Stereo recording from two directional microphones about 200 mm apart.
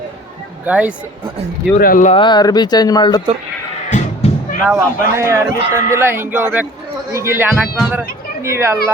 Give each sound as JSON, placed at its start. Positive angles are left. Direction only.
{"t": 0.6, "sound": "a man's voice", "side_deg": -5}
{"t": 1.8, "sound": "speech", "side_deg": 40}
{"t": 2.1, "sound": "speech", "side_deg": 20}
{"t": 3.8, "sound": "music", "side_deg": 35}
{"t": 4.7, "sound": "a man's voice", "side_deg": -15}